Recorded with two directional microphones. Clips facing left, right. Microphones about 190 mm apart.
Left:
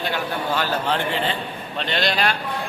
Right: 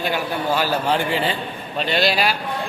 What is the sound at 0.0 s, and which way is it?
A man's voice, 10° right (ahead or behind).